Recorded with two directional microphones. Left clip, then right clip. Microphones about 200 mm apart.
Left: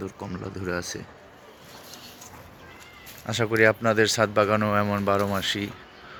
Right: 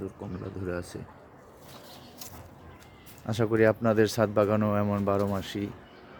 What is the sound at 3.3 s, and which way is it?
Speech, 20° right (ahead or behind).